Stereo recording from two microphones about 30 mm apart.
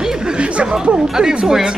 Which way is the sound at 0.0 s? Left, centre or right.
Right.